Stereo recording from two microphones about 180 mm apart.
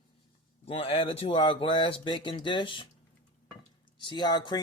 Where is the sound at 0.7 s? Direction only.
35° left (ahead or behind).